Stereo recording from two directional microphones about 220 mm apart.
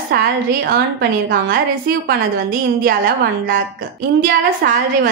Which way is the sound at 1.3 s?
45° right (ahead or behind).